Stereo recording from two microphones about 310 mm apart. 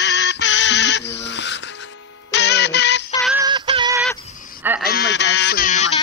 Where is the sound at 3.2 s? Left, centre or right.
Centre.